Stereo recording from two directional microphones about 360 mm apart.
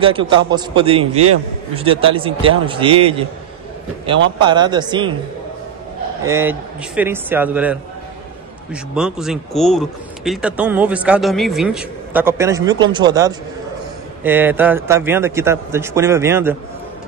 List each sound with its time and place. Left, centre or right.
0.0 s a man's voice: centre
4.4 s a man's voice: centre
6.2 s a man's voice: centre
8.9 s a man's voice: centre